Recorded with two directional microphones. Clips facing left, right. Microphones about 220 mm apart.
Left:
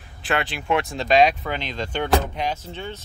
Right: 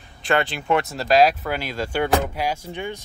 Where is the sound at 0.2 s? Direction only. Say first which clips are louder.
Right 3 dB; centre (ahead or behind).